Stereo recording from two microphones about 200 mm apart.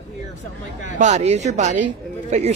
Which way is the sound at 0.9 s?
35° right (ahead or behind).